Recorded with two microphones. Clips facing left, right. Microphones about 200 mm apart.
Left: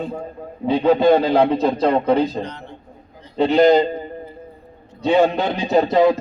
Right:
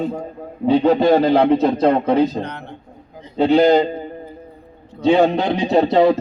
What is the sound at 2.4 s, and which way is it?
Speech, 60° right (ahead or behind).